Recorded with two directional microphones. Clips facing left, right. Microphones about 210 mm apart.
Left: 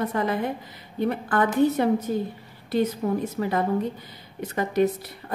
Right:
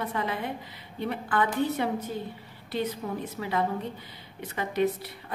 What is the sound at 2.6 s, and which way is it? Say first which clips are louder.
Speech: left 7 dB; 45° left (ahead or behind).